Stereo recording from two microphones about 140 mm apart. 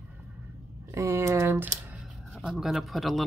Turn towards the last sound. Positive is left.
turn(degrees=0)  # may be behind; listen again after turning